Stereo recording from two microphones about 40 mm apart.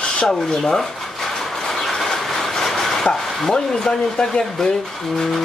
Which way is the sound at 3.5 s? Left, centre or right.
Left.